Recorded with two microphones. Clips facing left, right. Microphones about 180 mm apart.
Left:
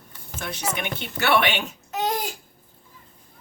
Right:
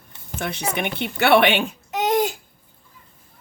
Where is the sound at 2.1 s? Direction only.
20° right (ahead or behind).